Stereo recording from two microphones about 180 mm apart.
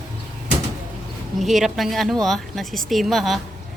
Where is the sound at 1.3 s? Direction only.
Centre (ahead or behind).